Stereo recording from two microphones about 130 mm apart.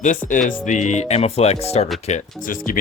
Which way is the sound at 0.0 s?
80° left.